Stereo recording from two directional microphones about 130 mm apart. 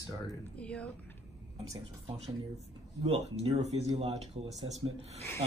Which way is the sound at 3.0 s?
55° right (ahead or behind).